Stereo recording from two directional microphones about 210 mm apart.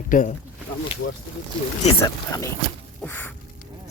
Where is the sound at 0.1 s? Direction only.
40° left (ahead or behind).